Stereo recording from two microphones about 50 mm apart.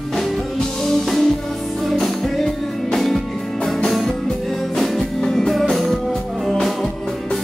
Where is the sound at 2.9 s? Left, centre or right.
Centre.